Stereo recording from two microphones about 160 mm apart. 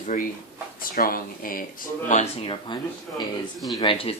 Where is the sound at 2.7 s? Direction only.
30° left (ahead or behind).